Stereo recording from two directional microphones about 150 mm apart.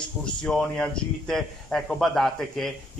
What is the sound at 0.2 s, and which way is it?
Speech, 5° left (ahead or behind).